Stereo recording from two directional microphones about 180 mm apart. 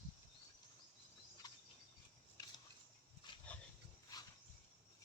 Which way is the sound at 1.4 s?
20° left (ahead or behind).